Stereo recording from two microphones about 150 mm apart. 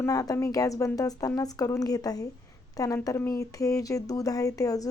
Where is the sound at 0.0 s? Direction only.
25° left (ahead or behind).